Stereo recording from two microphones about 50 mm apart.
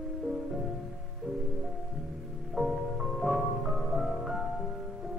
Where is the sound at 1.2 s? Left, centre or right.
Centre.